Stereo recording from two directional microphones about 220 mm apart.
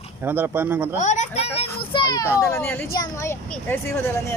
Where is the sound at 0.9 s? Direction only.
30° left (ahead or behind); by 3.7 s 10° left (ahead or behind).